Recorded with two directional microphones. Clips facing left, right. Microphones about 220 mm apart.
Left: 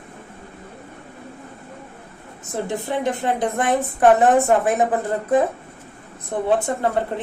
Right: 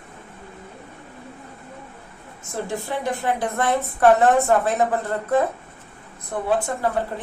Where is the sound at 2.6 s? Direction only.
20° left (ahead or behind).